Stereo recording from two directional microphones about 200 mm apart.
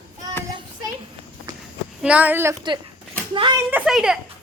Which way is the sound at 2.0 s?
5° right (ahead or behind).